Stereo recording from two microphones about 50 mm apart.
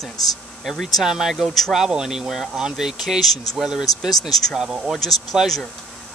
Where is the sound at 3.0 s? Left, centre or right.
Centre.